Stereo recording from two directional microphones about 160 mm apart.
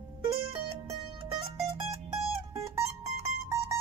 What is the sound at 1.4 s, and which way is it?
Music, 35° right (ahead or behind).